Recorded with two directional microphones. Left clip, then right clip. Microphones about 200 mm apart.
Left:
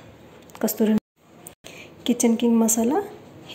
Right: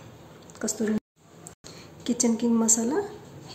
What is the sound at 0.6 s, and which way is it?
Speech, 20° left (ahead or behind).